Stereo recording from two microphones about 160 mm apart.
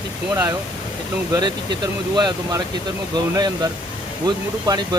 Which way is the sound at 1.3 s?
25° right (ahead or behind).